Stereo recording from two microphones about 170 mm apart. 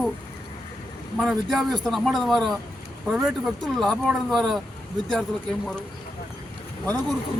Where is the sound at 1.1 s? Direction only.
Centre (ahead or behind).